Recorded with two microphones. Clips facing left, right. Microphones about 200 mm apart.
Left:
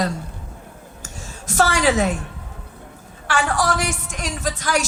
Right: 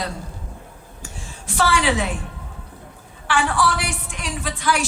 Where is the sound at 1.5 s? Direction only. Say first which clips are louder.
Left 2 dB; 45° left (ahead or behind).